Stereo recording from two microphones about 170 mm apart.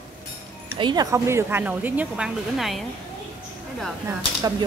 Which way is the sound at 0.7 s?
25° right (ahead or behind).